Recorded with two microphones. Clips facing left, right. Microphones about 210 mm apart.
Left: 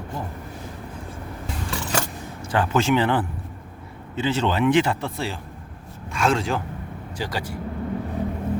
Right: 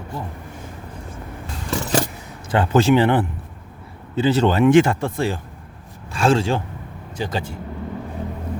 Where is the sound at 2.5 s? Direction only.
30° right (ahead or behind).